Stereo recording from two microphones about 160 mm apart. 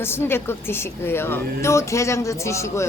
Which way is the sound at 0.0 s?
15° left (ahead or behind).